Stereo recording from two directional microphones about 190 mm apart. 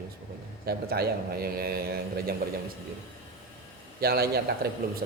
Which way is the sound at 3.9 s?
55° right (ahead or behind).